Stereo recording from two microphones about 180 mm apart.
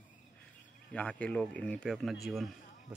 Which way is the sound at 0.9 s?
5° left (ahead or behind).